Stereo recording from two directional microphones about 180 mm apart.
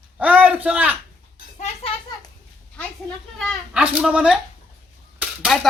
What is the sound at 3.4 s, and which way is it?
Speech, centre (ahead or behind).